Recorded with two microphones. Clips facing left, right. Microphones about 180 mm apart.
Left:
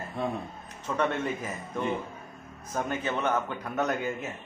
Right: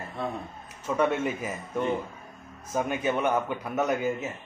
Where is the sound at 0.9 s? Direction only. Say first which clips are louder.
Right 3 dB; 10° right (ahead or behind).